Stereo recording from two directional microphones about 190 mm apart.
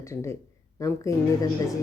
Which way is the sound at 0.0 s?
15° left (ahead or behind).